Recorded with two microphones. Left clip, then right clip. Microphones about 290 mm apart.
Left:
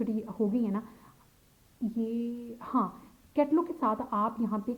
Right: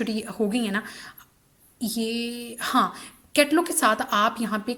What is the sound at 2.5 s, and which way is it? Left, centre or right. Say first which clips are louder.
A woman's voice: right 9 dB; right.